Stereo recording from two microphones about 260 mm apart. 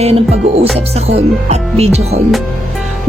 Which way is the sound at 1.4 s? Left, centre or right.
Right.